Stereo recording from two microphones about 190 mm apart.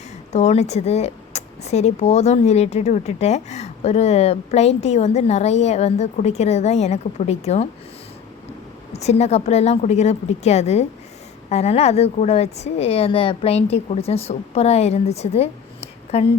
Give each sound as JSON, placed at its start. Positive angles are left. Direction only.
{"t": 0.3, "sound": "speech", "side_deg": 35}
{"t": 8.9, "sound": "a woman's voice", "side_deg": 35}